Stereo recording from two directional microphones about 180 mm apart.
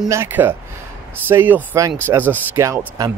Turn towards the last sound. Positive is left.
turn(degrees=-15)  # may be behind; listen again after turning